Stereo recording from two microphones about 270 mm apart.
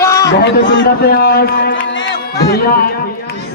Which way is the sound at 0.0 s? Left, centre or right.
Centre.